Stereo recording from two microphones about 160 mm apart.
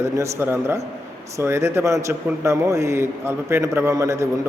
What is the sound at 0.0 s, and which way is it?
A man's voice, 15° right (ahead or behind).